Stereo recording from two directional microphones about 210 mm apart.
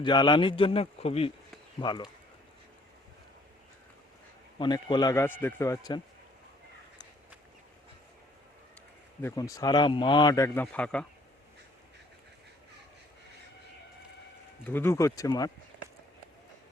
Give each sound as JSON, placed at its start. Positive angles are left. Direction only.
{"t": 0.0, "sound": "speech", "side_deg": 20}
{"t": 4.5, "sound": "a man's voice", "side_deg": 20}
{"t": 9.2, "sound": "a man's voice", "side_deg": 15}
{"t": 14.7, "sound": "a man's voice", "side_deg": 10}